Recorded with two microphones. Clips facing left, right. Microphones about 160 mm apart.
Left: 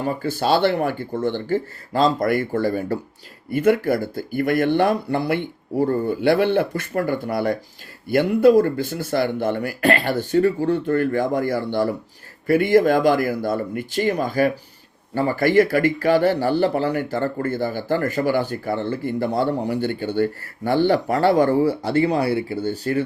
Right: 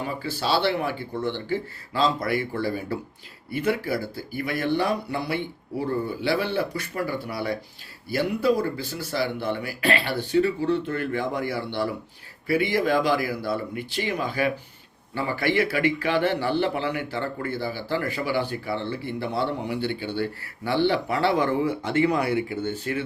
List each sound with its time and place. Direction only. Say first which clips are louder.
0.0 s speech: left 6 dB; 50° left (ahead or behind)